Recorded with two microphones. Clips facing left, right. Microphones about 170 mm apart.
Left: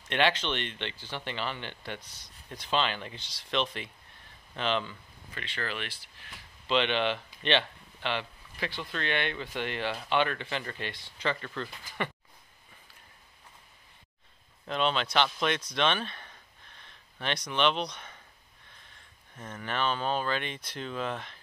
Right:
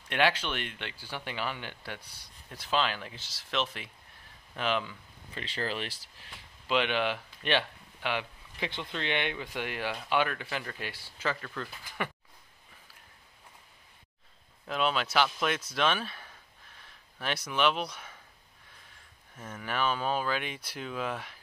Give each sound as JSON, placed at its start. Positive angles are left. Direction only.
{"t": 0.1, "sound": "speech", "side_deg": -5}
{"t": 5.3, "sound": "speech", "side_deg": -35}
{"t": 6.7, "sound": "speech", "side_deg": -5}
{"t": 14.7, "sound": "speech", "side_deg": -5}
{"t": 19.3, "sound": "speech", "side_deg": -5}